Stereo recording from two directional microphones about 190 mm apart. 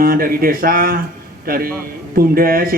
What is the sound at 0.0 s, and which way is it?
Speech, 50° right (ahead or behind).